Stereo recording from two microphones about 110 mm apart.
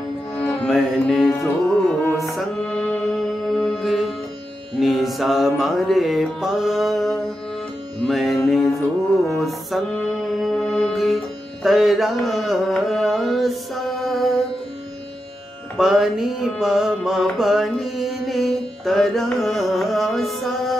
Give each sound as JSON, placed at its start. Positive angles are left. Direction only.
{"t": 0.3, "sound": "music", "side_deg": 15}
{"t": 0.7, "sound": "mantra", "side_deg": 0}
{"t": 2.1, "sound": "music", "side_deg": 0}
{"t": 4.7, "sound": "mantra", "side_deg": 0}
{"t": 8.5, "sound": "music", "side_deg": 0}
{"t": 11.6, "sound": "carnatic music", "side_deg": 0}
{"t": 15.8, "sound": "mantra", "side_deg": 0}